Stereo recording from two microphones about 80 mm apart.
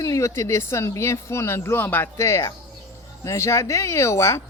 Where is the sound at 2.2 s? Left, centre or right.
Left.